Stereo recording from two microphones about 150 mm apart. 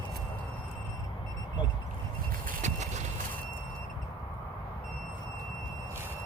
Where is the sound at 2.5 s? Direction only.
50° right (ahead or behind).